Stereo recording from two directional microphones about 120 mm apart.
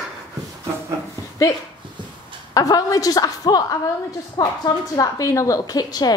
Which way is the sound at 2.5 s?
30° left (ahead or behind).